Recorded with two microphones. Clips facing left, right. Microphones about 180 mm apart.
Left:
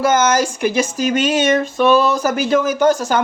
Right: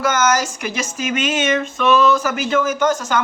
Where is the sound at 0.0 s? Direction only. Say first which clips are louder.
Left 3 dB; 30° left (ahead or behind).